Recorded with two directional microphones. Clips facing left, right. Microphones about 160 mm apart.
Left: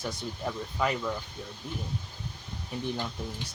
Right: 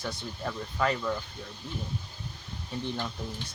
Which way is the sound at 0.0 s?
15° left (ahead or behind).